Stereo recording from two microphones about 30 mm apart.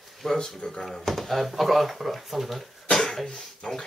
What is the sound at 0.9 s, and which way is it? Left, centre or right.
Speech, centre.